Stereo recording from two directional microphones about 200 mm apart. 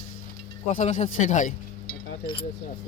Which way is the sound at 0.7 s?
40° left (ahead or behind).